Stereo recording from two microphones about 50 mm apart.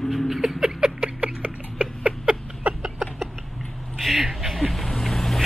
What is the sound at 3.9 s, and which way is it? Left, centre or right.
Vehicle, centre.